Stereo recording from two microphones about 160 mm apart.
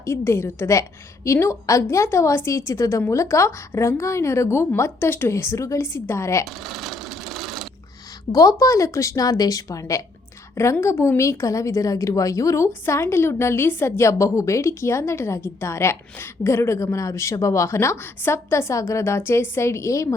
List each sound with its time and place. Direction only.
0.0 s a woman's voice: 15° left (ahead or behind)
6.7 s sewing machine: centre (ahead or behind)
8.3 s a woman's voice: 20° left (ahead or behind)